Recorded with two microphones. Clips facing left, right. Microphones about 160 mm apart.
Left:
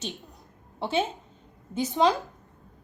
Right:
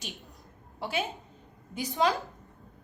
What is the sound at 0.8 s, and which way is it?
A woman's voice, 25° left (ahead or behind).